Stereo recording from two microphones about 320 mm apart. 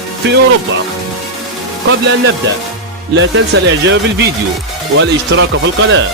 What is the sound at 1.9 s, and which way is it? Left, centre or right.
Speech, right.